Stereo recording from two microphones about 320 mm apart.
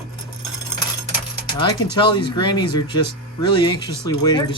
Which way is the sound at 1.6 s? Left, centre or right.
Centre.